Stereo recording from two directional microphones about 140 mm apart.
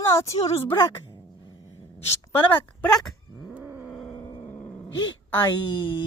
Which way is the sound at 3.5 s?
10° right (ahead or behind).